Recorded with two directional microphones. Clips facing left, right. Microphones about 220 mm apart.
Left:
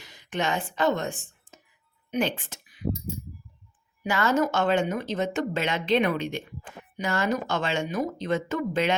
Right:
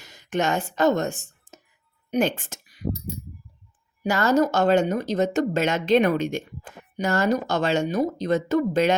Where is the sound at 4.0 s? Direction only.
40° right (ahead or behind).